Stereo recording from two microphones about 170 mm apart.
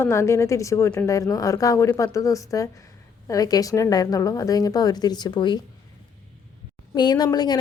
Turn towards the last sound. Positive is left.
turn(degrees=25)  # may be behind; listen again after turning